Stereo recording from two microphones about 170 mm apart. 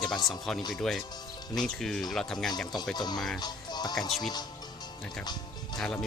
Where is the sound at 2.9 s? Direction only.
25° left (ahead or behind).